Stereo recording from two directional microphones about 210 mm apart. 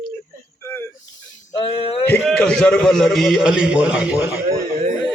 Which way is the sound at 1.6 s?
25° left (ahead or behind).